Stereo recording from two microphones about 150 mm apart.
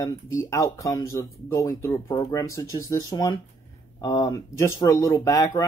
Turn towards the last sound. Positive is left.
turn(degrees=25)  # may be behind; listen again after turning